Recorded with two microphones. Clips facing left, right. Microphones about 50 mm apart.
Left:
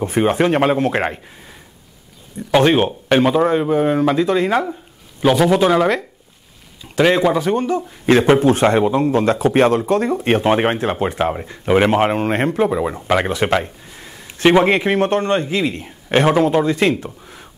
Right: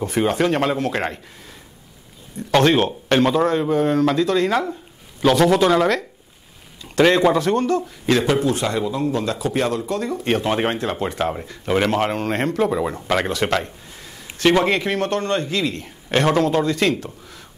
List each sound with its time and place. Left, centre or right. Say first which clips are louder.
0.0 s speech: left 3 dB; left
2.3 s speech: left 2 dB; centre
8.1 s speech: left 6 dB; left